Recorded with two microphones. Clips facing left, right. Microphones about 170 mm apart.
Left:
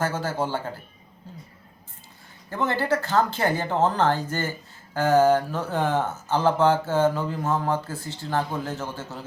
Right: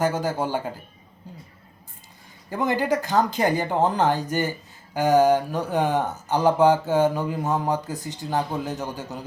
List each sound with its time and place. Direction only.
0.0 s speech: 15° right (ahead or behind)
2.5 s speech: 15° right (ahead or behind)